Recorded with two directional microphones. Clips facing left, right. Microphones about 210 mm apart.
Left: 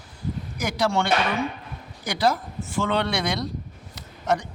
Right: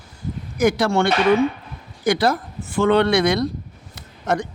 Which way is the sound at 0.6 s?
55° right (ahead or behind).